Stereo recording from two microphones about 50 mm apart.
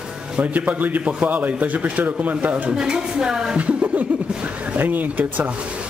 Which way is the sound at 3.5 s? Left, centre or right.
Right.